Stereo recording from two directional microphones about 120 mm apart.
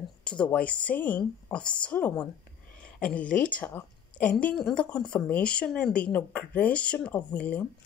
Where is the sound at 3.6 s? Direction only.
15° left (ahead or behind).